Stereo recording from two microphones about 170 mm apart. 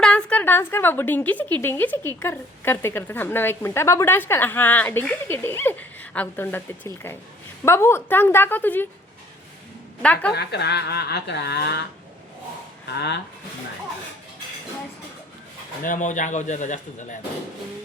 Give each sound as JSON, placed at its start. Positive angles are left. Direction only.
{"t": 0.0, "sound": "a woman's voice", "side_deg": 5}
{"t": 10.0, "sound": "a woman's voice", "side_deg": 5}
{"t": 10.3, "sound": "speech", "side_deg": 75}
{"t": 12.9, "sound": "speech", "side_deg": 90}
{"t": 15.8, "sound": "speech", "side_deg": 50}